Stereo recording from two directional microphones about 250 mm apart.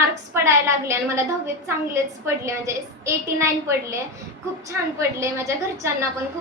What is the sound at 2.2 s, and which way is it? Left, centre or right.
A woman's voice, centre.